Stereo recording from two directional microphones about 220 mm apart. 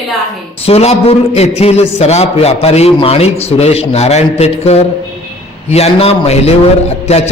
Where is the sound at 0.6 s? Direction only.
30° left (ahead or behind).